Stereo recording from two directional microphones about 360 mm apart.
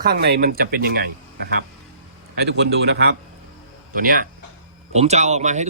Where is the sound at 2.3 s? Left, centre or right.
Right.